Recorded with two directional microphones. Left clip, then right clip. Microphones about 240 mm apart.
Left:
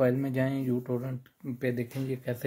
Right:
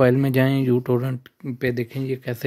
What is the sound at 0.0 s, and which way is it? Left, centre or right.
Speech, right.